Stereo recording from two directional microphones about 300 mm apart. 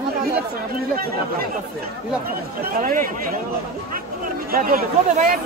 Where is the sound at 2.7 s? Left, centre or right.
Right.